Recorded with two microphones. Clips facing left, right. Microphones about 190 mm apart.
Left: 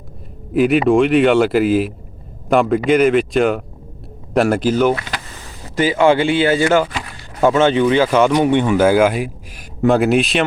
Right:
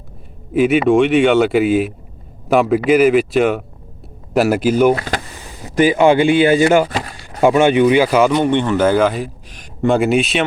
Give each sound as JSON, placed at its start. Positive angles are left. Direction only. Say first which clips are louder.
{"t": 0.5, "sound": "speech", "louder": "right 1 dB", "side_deg": 0}
{"t": 4.9, "sound": "power windows", "louder": "right 5 dB", "side_deg": -40}
{"t": 5.6, "sound": "speech", "louder": "right 2 dB", "side_deg": -15}
{"t": 6.8, "sound": "chop", "louder": "right 4 dB", "side_deg": -40}
{"t": 7.4, "sound": "speech", "louder": "right 2 dB", "side_deg": -15}
{"t": 8.4, "sound": "speech", "louder": "left 1 dB", "side_deg": 10}